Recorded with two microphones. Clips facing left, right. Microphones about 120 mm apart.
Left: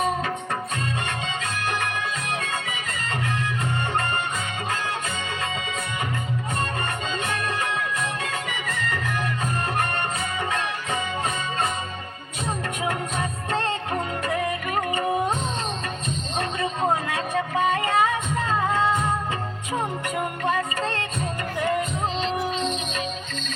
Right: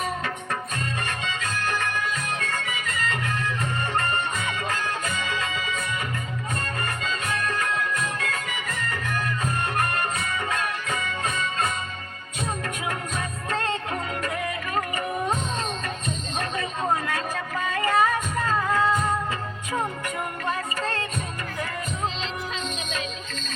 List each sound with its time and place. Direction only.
1.2 s music: 30° left (ahead or behind)
4.7 s music: 30° left (ahead or behind)
6.8 s music: 30° left (ahead or behind)
10.2 s music: 30° left (ahead or behind)
12.8 s music: 30° left (ahead or behind)
14.8 s music: 30° left (ahead or behind)
17.1 s music: 30° left (ahead or behind)